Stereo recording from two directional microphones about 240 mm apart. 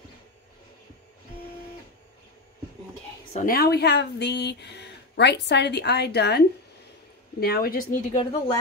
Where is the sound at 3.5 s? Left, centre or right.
Left.